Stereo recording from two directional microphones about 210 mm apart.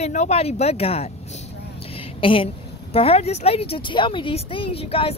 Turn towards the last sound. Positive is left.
turn(degrees=25)  # may be behind; listen again after turning